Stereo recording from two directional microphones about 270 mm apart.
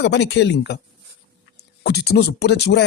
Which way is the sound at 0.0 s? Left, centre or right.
Left.